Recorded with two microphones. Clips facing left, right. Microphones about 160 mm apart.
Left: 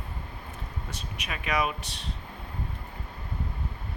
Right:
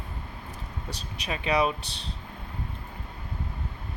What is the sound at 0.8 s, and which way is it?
Speech, 35° right (ahead or behind).